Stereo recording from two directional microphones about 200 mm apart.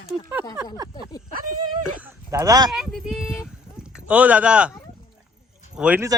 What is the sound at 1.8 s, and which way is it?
Speech, 10° right (ahead or behind).